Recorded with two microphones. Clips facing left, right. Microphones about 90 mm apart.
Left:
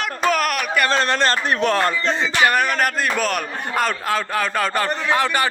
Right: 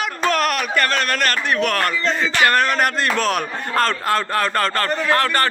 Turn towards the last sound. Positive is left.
turn(degrees=15)  # may be behind; listen again after turning